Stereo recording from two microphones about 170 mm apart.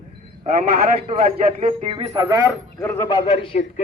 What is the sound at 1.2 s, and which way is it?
Speech, 35° right (ahead or behind).